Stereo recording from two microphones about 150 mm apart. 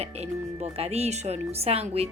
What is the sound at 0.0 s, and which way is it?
Speech, 45° right (ahead or behind).